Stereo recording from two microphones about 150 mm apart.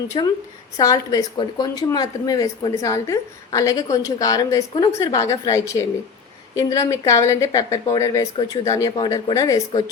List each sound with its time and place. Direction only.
0.1 s a woman's voice: 35° left (ahead or behind)
0.8 s a woman's voice: 25° left (ahead or behind)